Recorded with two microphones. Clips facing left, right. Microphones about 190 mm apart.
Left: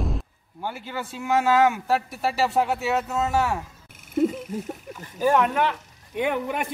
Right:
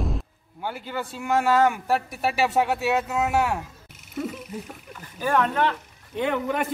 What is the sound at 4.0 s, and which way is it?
Frog, 50° left (ahead or behind).